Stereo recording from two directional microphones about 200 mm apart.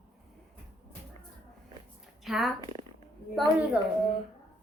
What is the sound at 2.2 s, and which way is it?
Speech, centre (ahead or behind).